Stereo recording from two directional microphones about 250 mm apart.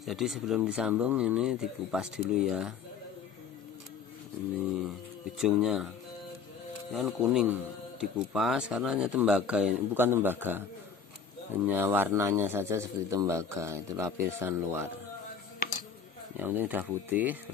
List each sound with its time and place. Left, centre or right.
0.0 s speech: centre
5.4 s speech: centre
6.9 s speech: centre
11.6 s a man's voice: centre
16.3 s a man's voice: centre